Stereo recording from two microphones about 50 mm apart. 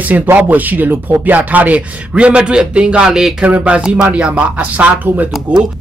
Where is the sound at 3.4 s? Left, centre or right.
Right.